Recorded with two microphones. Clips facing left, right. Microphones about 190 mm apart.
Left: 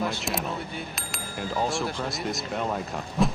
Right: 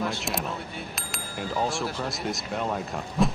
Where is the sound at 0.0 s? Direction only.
Centre (ahead or behind).